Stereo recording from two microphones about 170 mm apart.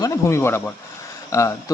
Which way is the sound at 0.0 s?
15° left (ahead or behind).